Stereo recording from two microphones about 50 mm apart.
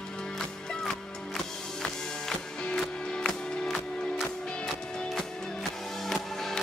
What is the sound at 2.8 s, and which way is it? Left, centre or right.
Music, centre.